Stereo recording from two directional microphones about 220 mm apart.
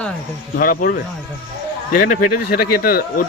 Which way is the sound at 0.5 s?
40° left (ahead or behind).